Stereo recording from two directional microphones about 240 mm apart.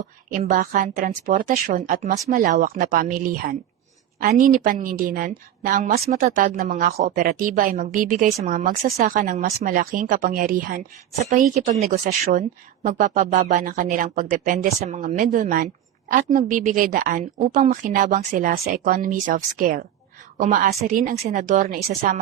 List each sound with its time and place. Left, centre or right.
0.3 s a woman's voice: right